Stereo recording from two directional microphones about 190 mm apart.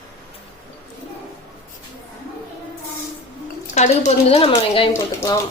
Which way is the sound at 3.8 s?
35° left (ahead or behind).